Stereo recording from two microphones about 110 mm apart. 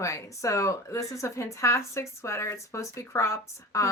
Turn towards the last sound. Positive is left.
turn(degrees=30)  # may be behind; listen again after turning